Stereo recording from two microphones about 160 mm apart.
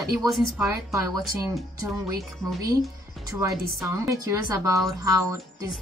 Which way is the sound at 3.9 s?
20° right (ahead or behind).